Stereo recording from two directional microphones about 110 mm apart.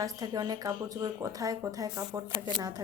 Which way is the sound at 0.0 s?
35° right (ahead or behind).